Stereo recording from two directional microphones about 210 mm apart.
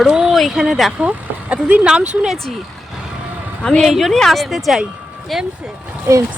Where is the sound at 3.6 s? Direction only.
Centre (ahead or behind).